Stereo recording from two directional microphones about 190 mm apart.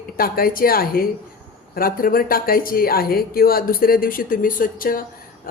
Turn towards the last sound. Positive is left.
turn(degrees=50)  # may be behind; listen again after turning